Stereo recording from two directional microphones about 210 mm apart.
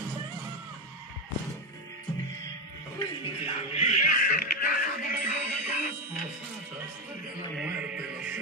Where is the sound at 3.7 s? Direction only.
30° left (ahead or behind).